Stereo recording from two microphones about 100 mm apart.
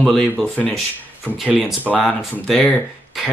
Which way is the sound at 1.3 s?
10° right (ahead or behind).